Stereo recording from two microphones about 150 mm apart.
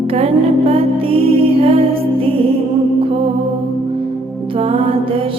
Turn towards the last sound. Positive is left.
turn(degrees=-35)  # may be behind; listen again after turning